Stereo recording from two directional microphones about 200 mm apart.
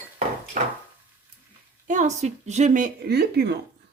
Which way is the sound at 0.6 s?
40° right (ahead or behind).